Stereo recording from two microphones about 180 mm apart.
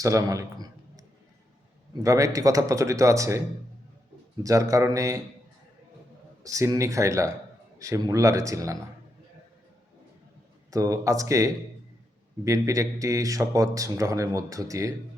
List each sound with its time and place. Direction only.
0.0 s a man's voice: 20° right (ahead or behind)
4.4 s a man's voice: 20° right (ahead or behind)
6.4 s a man's voice: 20° right (ahead or behind)
10.7 s a man's voice: 20° right (ahead or behind)